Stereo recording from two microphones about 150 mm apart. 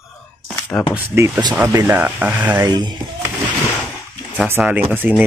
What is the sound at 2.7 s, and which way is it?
Speech, 30° right (ahead or behind).